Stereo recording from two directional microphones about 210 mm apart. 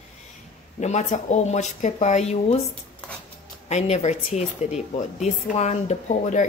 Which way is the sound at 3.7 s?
30° left (ahead or behind).